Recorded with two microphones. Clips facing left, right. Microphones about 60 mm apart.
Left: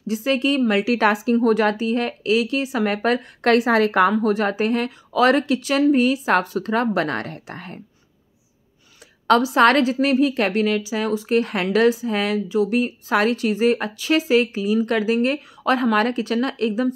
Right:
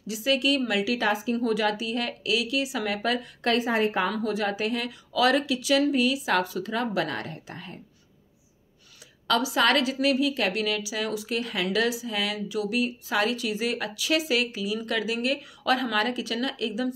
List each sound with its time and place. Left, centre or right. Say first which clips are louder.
0.0 s a woman's voice: left 4 dB; left
4.2 s speech: left 7 dB; left
9.3 s a woman's voice: left 8 dB; left